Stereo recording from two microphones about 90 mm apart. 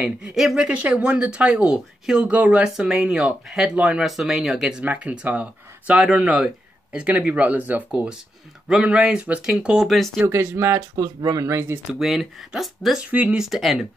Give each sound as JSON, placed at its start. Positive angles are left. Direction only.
{"t": 0.0, "sound": "speech", "side_deg": -5}
{"t": 0.7, "sound": "speech", "side_deg": -15}
{"t": 9.8, "sound": "speech", "side_deg": 0}
{"t": 10.2, "sound": "speech", "side_deg": -30}
{"t": 11.1, "sound": "speech", "side_deg": -40}
{"t": 11.9, "sound": "speech", "side_deg": 0}
{"t": 13.1, "sound": "speech", "side_deg": -15}
{"t": 13.4, "sound": "speech", "side_deg": 0}